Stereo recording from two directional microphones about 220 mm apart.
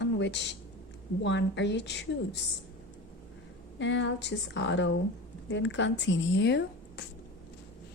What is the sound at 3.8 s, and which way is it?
A woman's voice, 55° left (ahead or behind).